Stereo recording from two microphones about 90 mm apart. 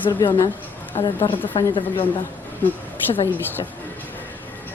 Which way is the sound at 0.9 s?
90° left.